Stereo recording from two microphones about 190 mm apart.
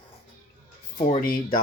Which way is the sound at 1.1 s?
45° left (ahead or behind).